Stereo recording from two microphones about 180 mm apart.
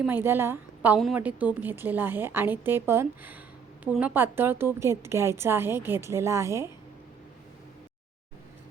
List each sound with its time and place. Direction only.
0.0 s a woman's voice: 10° right (ahead or behind)